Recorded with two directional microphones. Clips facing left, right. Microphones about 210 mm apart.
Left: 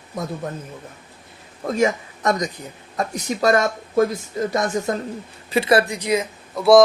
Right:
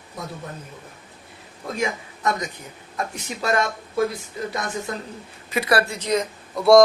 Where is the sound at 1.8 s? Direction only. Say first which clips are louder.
Left 7 dB; 40° left (ahead or behind).